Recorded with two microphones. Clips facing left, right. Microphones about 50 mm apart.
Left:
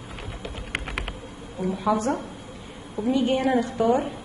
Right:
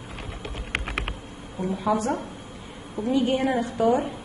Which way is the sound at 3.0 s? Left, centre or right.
Right.